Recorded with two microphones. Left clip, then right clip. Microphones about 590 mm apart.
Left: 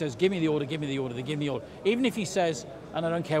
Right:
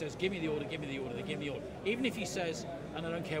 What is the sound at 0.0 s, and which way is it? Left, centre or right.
A man's voice, left.